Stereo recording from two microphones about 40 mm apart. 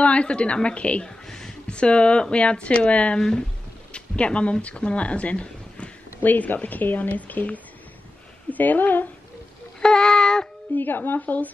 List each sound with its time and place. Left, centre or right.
0.0 s a woman's voice: left
1.2 s a sound: centre
1.7 s a woman's voice: left
3.2 s speech: centre
6.2 s speech: left
9.8 s child singing: centre
10.7 s speech: left